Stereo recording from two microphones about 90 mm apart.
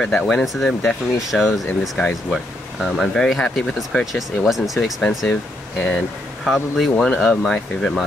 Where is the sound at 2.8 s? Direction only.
Centre (ahead or behind).